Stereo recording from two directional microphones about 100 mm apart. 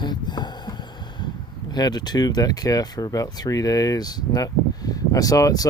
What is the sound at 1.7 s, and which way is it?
Speech, 45° left (ahead or behind).